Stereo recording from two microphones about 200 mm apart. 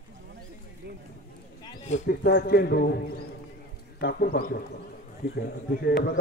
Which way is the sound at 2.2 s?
50° left (ahead or behind).